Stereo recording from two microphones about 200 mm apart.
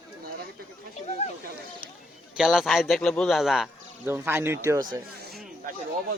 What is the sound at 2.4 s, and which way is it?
Speech, centre (ahead or behind).